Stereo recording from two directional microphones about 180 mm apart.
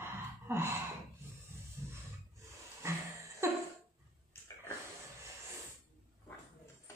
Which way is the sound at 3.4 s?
15° right (ahead or behind).